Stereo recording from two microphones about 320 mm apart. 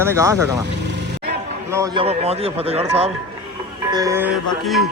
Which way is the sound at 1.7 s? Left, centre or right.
Centre.